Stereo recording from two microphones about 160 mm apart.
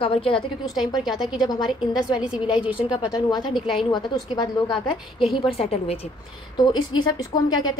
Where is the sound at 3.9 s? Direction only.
25° left (ahead or behind).